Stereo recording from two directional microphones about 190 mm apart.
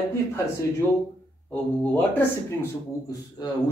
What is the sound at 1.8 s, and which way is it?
Speech, 10° left (ahead or behind).